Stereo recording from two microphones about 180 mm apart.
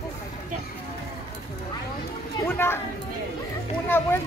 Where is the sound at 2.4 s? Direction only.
10° left (ahead or behind).